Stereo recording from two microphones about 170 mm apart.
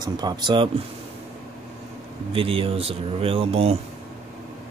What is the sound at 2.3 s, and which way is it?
Speech, 35° right (ahead or behind).